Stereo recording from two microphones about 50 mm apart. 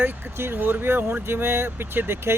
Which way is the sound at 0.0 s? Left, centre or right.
Right.